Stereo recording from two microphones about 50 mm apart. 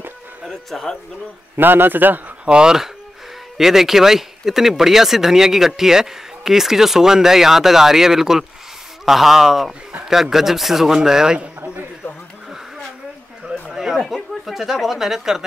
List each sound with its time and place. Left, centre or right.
0.5 s a man's voice: centre
1.6 s a man's voice: right
2.4 s a man's voice: centre
13.5 s a sound: centre
14.4 s speech: centre